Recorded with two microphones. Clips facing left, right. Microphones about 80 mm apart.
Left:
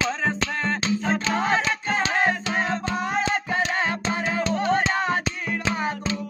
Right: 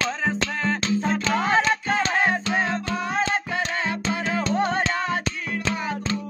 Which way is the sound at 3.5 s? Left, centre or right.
Left.